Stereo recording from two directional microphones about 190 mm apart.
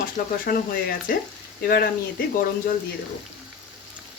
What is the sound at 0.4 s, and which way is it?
Speech, 50° left (ahead or behind).